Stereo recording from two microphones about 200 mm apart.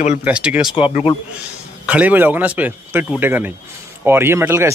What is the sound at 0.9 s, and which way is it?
Speech, 30° left (ahead or behind).